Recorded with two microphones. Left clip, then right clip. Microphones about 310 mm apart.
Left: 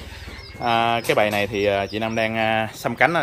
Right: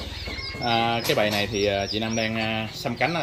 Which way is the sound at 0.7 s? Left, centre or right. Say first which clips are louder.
Left 4 dB; centre.